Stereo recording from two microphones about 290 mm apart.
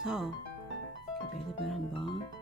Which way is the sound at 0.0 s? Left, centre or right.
Centre.